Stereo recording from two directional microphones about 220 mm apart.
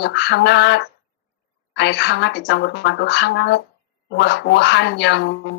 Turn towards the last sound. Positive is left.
turn(degrees=50)  # may be behind; listen again after turning